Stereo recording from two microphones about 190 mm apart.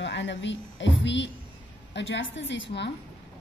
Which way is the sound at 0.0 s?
70° left (ahead or behind).